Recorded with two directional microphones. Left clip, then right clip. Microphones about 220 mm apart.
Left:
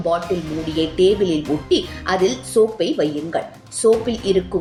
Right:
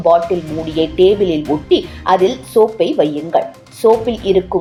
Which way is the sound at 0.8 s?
Centre (ahead or behind).